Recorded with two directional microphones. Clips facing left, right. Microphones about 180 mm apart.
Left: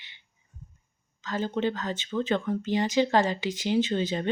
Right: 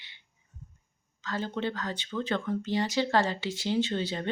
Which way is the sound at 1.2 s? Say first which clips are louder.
Left 4 dB; 15° left (ahead or behind).